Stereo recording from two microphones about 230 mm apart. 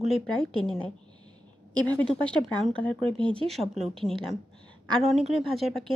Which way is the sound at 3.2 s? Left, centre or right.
Right.